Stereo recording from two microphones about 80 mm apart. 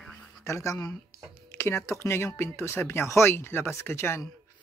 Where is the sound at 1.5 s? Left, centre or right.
Left.